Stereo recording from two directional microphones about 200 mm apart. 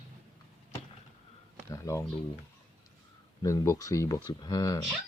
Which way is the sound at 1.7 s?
15° left (ahead or behind).